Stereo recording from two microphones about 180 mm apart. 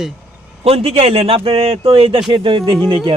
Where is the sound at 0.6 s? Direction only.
35° right (ahead or behind).